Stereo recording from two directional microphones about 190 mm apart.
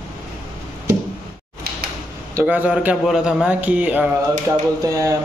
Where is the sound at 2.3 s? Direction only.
10° right (ahead or behind).